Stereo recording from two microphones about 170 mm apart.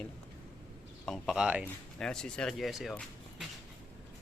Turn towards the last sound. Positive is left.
turn(degrees=0)  # may be behind; listen again after turning